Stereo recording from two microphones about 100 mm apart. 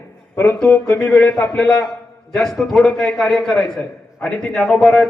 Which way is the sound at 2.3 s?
5° left (ahead or behind).